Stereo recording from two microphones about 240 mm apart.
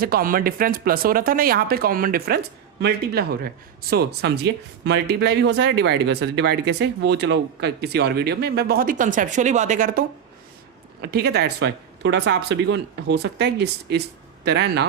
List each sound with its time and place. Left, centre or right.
0.0 s speech: right
11.0 s speech: right